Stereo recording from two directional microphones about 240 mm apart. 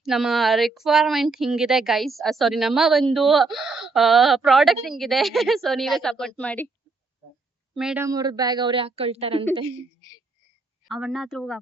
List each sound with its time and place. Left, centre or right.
0.0 s speech: centre
7.8 s speech: centre
8.0 s a woman's voice: centre
10.8 s speech: centre